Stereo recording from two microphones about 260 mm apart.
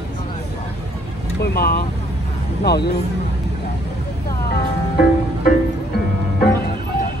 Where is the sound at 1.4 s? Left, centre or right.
Left.